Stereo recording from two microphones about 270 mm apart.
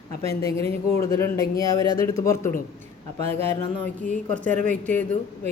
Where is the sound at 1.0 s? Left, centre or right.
Centre.